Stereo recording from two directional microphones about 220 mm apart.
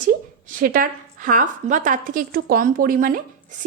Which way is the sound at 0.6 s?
40° right (ahead or behind).